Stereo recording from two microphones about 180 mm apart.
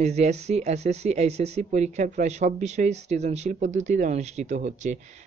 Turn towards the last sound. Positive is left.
turn(degrees=-40)  # may be behind; listen again after turning